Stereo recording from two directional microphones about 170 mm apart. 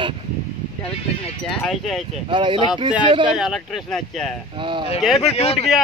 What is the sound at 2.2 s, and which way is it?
Speech, 30° right (ahead or behind).